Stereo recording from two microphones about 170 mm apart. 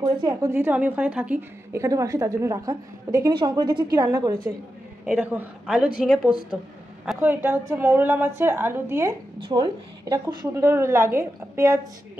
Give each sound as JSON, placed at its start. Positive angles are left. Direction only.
{"t": 0.0, "sound": "a woman's voice", "side_deg": -25}
{"t": 5.0, "sound": "a woman's voice", "side_deg": -5}
{"t": 9.4, "sound": "a woman's voice", "side_deg": -25}